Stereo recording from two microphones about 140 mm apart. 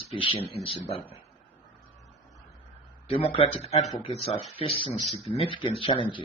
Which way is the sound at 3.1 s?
40° left (ahead or behind).